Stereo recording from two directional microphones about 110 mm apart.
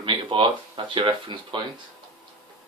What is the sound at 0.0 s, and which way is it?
Speech, 50° right (ahead or behind).